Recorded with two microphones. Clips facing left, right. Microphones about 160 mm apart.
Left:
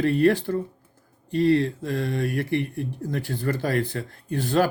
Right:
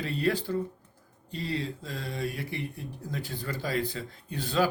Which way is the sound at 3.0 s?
55° left (ahead or behind).